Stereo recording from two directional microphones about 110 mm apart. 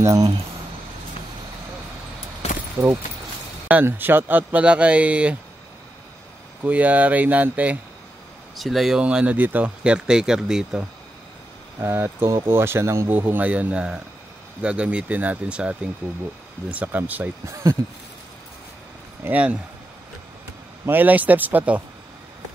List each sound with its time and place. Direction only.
0.0 s speech: 30° right (ahead or behind)
2.4 s a sound: 70° left (ahead or behind)
3.6 s speech: 15° right (ahead or behind)
6.6 s speech: 15° right (ahead or behind)
8.5 s speech: centre (ahead or behind)
11.8 s speech: 20° right (ahead or behind)
16.7 s speech: 15° right (ahead or behind)
19.2 s speech: 10° right (ahead or behind)
20.8 s speech: 15° right (ahead or behind)